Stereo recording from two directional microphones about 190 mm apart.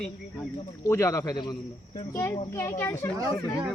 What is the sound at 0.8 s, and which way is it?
Speech, 15° left (ahead or behind).